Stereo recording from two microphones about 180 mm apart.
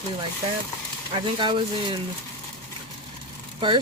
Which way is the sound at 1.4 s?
25° right (ahead or behind).